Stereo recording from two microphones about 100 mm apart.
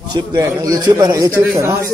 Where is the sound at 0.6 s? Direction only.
40° right (ahead or behind).